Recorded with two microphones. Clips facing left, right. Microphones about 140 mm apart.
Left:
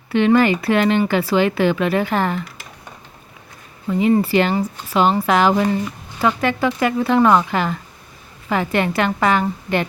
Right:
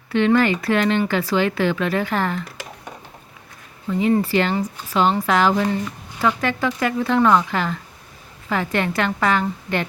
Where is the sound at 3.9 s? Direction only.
15° left (ahead or behind).